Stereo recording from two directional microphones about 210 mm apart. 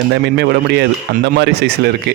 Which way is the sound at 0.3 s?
50° right (ahead or behind).